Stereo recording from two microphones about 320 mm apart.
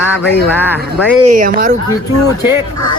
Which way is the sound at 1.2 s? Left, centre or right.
Right.